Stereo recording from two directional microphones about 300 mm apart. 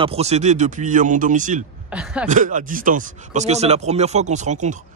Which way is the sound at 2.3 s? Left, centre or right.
Right.